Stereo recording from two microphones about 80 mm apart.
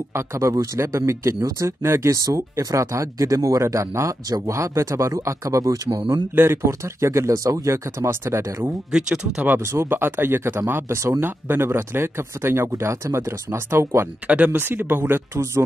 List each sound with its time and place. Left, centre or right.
0.1 s speech: right
5.9 s speech: right
6.3 s speech: right
8.9 s speech: centre
9.7 s speech: right
14.2 s speech: centre